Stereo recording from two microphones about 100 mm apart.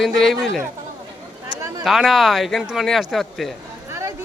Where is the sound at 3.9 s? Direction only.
30° right (ahead or behind).